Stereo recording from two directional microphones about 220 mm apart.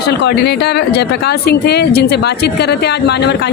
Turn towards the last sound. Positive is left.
turn(degrees=50)  # may be behind; listen again after turning